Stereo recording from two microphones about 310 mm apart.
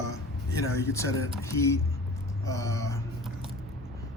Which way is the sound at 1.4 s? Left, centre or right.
Centre.